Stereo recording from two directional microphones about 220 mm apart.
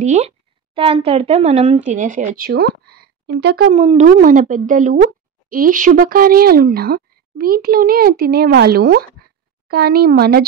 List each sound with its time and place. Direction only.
0.0 s speech: 30° right (ahead or behind); by 3.7 s 50° right (ahead or behind)
3.7 s speech: 30° right (ahead or behind)